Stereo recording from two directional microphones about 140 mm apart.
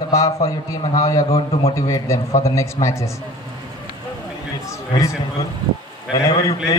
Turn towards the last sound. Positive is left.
turn(degrees=25)  # may be behind; listen again after turning